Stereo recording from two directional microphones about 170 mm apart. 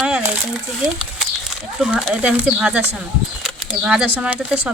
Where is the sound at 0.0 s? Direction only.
5° right (ahead or behind).